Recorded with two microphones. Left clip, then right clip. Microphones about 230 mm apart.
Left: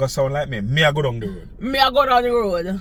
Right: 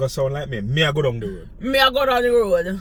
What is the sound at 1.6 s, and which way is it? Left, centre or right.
Speech, right.